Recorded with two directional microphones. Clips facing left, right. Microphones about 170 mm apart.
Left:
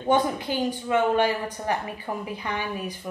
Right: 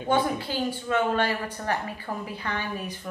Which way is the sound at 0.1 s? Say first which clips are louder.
Left 2 dB; 15° left (ahead or behind).